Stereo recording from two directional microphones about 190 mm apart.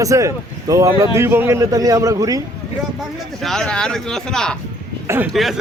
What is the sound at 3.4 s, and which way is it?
Speech, 5° left (ahead or behind).